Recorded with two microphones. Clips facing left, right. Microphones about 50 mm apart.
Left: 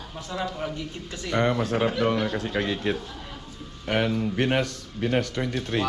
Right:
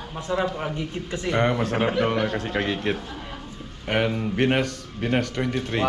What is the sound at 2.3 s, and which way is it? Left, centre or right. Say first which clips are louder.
Speech: right 1 dB; right.